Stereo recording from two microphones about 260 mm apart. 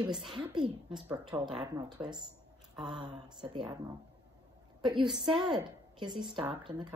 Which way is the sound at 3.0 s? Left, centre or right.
Centre.